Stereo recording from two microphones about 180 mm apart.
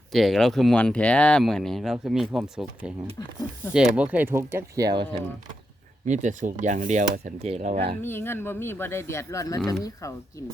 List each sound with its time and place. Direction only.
0.1 s speech: centre (ahead or behind); by 5.2 s 25° right (ahead or behind)
6.1 s speech: 45° right (ahead or behind)
8.0 s speech: 10° left (ahead or behind)